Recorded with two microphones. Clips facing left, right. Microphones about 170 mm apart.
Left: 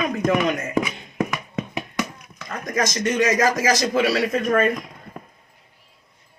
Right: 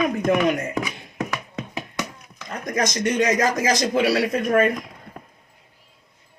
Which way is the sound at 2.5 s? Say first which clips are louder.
Even; 20° right (ahead or behind).